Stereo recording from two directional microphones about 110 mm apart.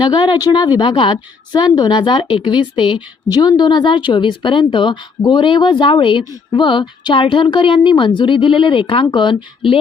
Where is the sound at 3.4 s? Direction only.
40° left (ahead or behind).